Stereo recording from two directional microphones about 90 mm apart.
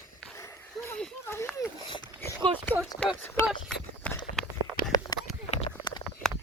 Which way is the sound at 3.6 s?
15° left (ahead or behind).